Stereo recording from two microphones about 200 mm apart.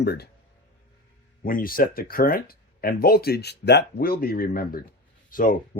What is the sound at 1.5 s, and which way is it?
Speech, 45° left (ahead or behind).